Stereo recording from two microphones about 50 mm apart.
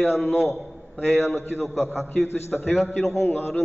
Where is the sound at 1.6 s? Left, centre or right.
Centre.